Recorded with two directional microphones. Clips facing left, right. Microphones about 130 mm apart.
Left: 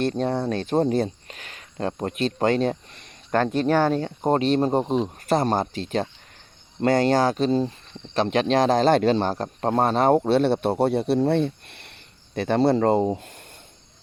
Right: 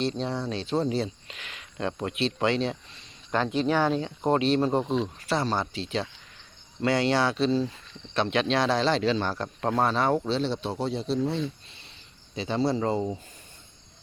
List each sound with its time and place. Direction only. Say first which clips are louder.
0.0 s speech: left 5 dB; 55° left (ahead or behind); by 9.9 s 35° left (ahead or behind)
9.9 s speech: left 7 dB; 50° left (ahead or behind)